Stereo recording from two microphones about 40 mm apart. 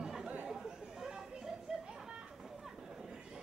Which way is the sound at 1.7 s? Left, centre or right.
Centre.